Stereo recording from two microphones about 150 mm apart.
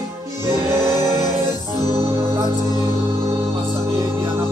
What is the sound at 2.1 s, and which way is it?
Music, 25° right (ahead or behind).